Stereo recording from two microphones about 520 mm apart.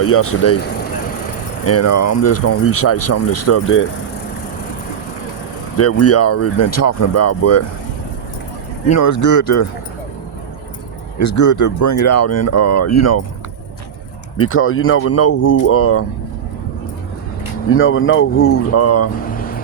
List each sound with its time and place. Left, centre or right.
0.0 s speech: left
1.6 s speech: left
5.7 s speech: left
8.9 s speech: left
11.2 s speech: left
14.3 s speech: left
17.7 s speech: left